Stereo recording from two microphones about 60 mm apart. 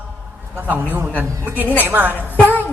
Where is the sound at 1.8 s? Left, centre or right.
Right.